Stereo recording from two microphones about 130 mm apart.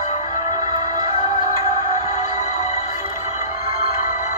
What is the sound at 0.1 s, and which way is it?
Music, 65° left (ahead or behind).